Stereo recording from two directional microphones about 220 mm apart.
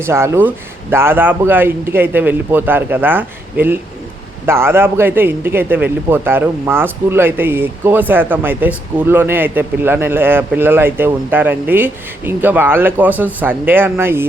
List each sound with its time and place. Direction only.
0.0 s a man's voice: 10° right (ahead or behind)